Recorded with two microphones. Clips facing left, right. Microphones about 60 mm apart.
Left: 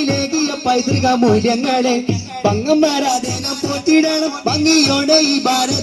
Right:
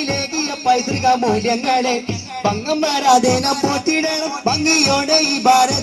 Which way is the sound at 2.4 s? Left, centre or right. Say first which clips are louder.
Left 5 dB; right.